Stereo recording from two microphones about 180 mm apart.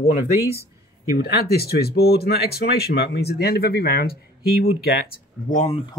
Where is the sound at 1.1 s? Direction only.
55° left (ahead or behind).